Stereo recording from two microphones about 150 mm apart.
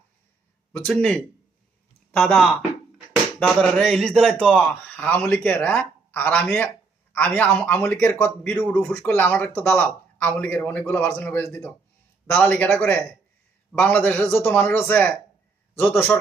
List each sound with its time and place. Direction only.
0.9 s a man's voice: 5° left (ahead or behind)